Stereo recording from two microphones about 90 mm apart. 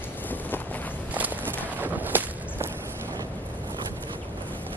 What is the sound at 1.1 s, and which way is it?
Walk, 20° right (ahead or behind).